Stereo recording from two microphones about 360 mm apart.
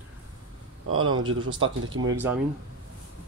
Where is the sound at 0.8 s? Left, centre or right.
Right.